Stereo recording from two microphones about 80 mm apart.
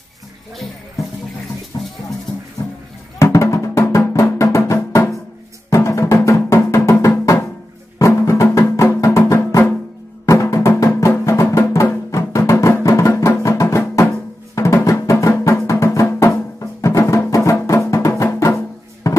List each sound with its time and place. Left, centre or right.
1.7 s music: left
3.2 s music: left